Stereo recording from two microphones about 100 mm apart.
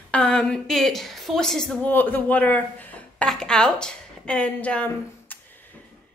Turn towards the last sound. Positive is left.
turn(degrees=15)  # may be behind; listen again after turning